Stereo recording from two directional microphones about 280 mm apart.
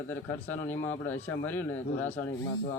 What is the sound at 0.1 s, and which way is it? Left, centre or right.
Speech, centre.